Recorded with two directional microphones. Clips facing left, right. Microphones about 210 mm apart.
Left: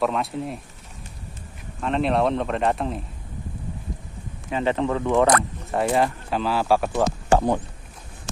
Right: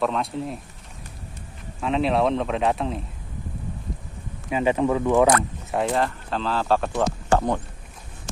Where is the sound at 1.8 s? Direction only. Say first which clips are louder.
Even; centre (ahead or behind).